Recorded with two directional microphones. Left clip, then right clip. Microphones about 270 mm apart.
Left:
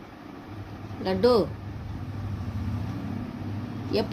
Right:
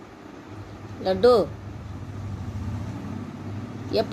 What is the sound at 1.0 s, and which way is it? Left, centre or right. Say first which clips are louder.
Speech: right 4 dB; left.